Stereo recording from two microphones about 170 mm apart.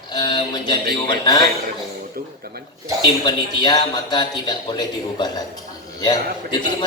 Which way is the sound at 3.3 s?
25° left (ahead or behind).